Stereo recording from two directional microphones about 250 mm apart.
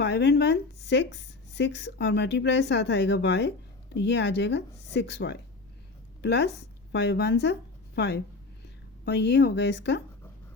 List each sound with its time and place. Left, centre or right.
0.0 s a woman's voice: left